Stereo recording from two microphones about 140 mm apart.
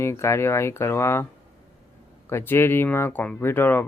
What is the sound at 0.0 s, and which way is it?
Speech, 20° left (ahead or behind).